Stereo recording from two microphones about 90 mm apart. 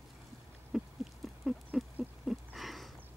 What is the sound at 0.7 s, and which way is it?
Owl, 5° right (ahead or behind).